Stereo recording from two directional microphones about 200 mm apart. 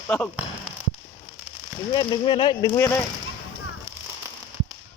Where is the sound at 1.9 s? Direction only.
20° left (ahead or behind).